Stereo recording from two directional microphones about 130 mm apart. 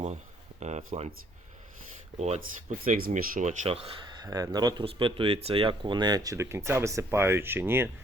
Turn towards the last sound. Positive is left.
turn(degrees=-15)  # may be behind; listen again after turning